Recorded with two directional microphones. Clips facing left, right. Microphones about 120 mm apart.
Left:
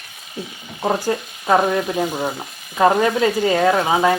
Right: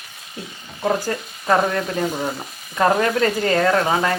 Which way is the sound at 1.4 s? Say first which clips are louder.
Left 2 dB; 5° left (ahead or behind).